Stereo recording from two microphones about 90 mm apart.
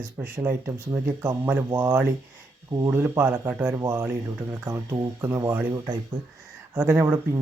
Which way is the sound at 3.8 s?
30° right (ahead or behind).